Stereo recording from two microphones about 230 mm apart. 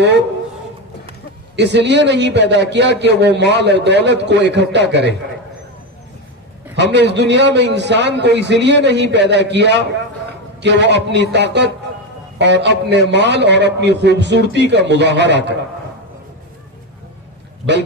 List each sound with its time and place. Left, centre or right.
1.6 s a man's voice: right
6.7 s a man's voice: right